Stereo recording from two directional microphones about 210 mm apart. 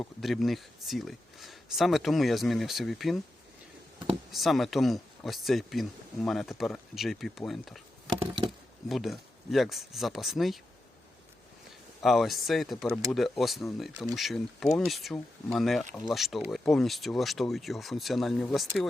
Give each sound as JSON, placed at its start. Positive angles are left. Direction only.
{"t": 0.0, "sound": "speech", "side_deg": 0}
{"t": 4.3, "sound": "speech", "side_deg": 0}
{"t": 8.2, "sound": "wood", "side_deg": -25}
{"t": 8.9, "sound": "speech", "side_deg": 0}
{"t": 12.0, "sound": "speech", "side_deg": 0}